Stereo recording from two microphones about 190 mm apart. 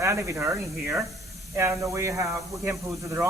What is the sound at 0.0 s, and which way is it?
Speech, 15° right (ahead or behind).